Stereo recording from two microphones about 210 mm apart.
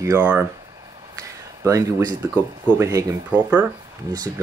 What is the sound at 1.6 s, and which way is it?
Speech, 15° right (ahead or behind).